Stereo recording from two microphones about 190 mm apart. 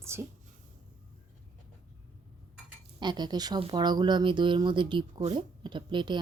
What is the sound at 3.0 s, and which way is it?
Speech, 20° right (ahead or behind).